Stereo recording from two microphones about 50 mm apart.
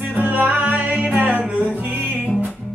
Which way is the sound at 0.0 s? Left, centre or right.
Right.